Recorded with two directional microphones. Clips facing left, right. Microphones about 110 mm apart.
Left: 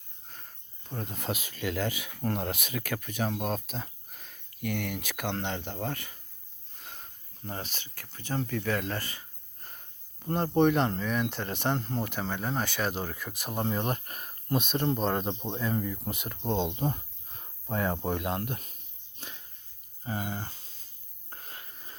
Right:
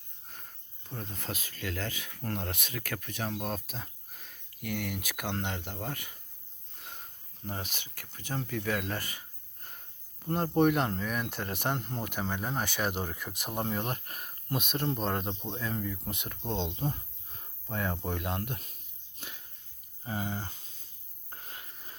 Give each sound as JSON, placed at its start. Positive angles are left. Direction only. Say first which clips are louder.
{"t": 1.1, "sound": "speech", "louder": "left 5 dB", "side_deg": 15}
{"t": 7.4, "sound": "speech", "louder": "left 1 dB", "side_deg": -10}
{"t": 9.6, "sound": "speech", "louder": "left 1 dB", "side_deg": 0}
{"t": 13.7, "sound": "speech", "louder": "left 3 dB", "side_deg": 0}
{"t": 16.6, "sound": "speech", "louder": "left 3 dB", "side_deg": 20}
{"t": 18.2, "sound": "speech", "louder": "left 3 dB", "side_deg": 5}
{"t": 20.1, "sound": "speech", "louder": "left 1 dB", "side_deg": -10}
{"t": 21.2, "sound": "a sound", "louder": "left 1 dB", "side_deg": -15}